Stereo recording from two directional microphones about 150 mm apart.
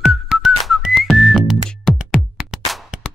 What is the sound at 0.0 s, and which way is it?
Whistling, centre (ahead or behind).